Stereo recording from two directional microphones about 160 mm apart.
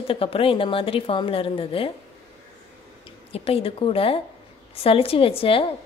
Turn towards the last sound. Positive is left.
turn(degrees=35)  # may be behind; listen again after turning